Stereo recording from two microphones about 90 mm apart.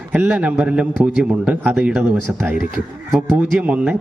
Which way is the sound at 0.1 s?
15° right (ahead or behind).